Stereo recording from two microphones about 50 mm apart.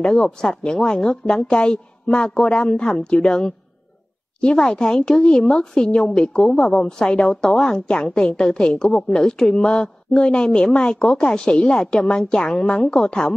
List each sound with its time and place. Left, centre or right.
0.1 s a woman's voice: centre
5.9 s a woman's voice: centre